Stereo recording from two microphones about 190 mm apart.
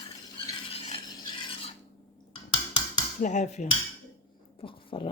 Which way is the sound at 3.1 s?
40° left (ahead or behind).